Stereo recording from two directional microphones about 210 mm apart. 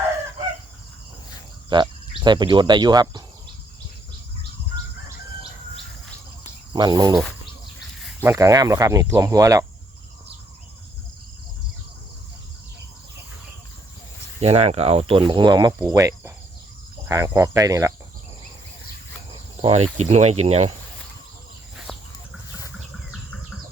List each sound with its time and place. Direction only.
1.7 s speech: 20° right (ahead or behind)
6.7 s speech: 20° right (ahead or behind)
8.2 s speech: 15° right (ahead or behind)
14.4 s speech: 30° right (ahead or behind)
19.6 s speech: 30° right (ahead or behind)
21.9 s chicken: 5° left (ahead or behind)